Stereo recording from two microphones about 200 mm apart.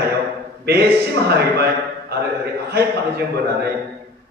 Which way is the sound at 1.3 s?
55° right (ahead or behind).